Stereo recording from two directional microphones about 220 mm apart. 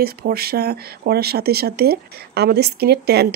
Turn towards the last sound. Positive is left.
turn(degrees=-45)  # may be behind; listen again after turning